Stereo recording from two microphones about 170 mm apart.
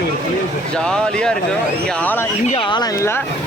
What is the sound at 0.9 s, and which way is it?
A man's voice, 5° left (ahead or behind).